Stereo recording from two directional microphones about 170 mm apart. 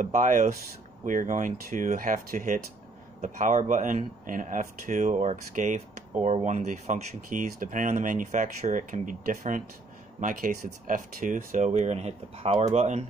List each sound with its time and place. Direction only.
0.0 s speech: 50° right (ahead or behind)